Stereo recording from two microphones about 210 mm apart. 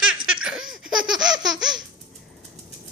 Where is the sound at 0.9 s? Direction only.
5° right (ahead or behind).